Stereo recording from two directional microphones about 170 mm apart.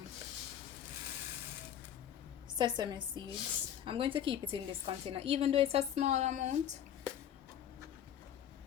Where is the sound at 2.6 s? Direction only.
25° right (ahead or behind); by 6.5 s 45° right (ahead or behind).